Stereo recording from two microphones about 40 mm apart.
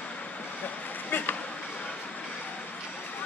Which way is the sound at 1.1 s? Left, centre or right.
Left.